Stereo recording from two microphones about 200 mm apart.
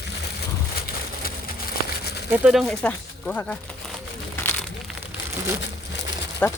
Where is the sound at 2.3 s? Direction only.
5° right (ahead or behind).